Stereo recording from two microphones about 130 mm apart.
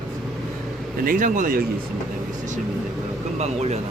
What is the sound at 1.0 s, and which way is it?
Speech, 90° right.